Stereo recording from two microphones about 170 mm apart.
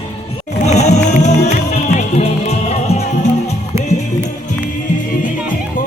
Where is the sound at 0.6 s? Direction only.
40° left (ahead or behind).